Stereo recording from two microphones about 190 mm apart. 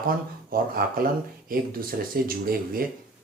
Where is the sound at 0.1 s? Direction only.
50° right (ahead or behind).